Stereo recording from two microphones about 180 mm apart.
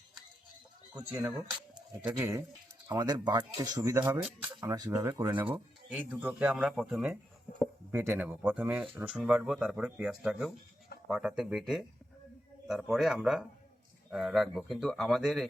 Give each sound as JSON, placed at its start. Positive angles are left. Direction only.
{"t": 0.9, "sound": "speech", "side_deg": -20}
{"t": 2.9, "sound": "speech", "side_deg": -25}